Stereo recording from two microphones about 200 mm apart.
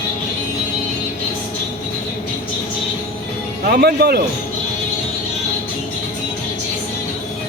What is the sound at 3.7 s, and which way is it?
Speech, 50° right (ahead or behind).